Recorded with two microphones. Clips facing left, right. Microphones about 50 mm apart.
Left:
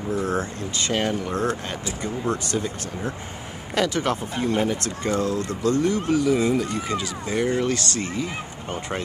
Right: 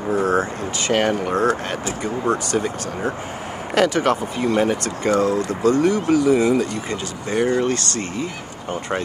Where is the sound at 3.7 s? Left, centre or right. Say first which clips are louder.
Right 5 dB; right.